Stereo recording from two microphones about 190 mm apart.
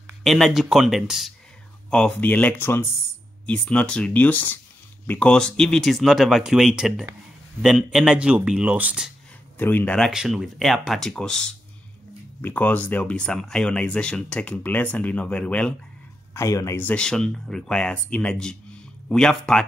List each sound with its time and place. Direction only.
0.2 s speech: centre (ahead or behind)
9.6 s speech: 10° left (ahead or behind)